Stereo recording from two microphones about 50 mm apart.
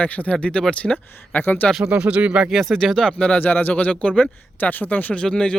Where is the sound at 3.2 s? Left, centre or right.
Left.